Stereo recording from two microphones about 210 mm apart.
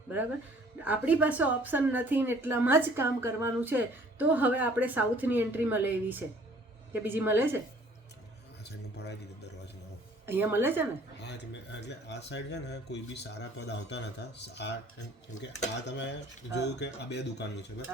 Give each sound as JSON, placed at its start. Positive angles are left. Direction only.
{"t": 0.9, "sound": "a woman's voice", "side_deg": -5}
{"t": 9.0, "sound": "a man's voice", "side_deg": 50}
{"t": 10.2, "sound": "a woman's voice", "side_deg": -10}
{"t": 11.2, "sound": "speech", "side_deg": 55}
{"t": 15.9, "sound": "cutlery", "side_deg": 55}
{"t": 16.6, "sound": "speech", "side_deg": 55}